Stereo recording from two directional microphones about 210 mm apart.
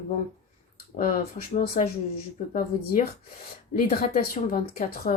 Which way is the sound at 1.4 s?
40° left (ahead or behind).